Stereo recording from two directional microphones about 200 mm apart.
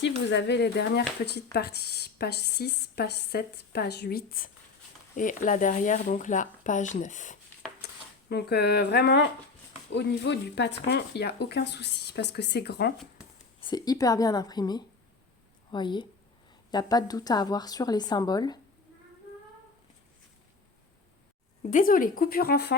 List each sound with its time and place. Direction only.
0.3 s a woman's voice: 60° left (ahead or behind); by 7.3 s 40° left (ahead or behind)
8.3 s speech: 55° left (ahead or behind)
13.6 s a woman's voice: 20° left (ahead or behind)
21.7 s a woman's voice: 40° left (ahead or behind)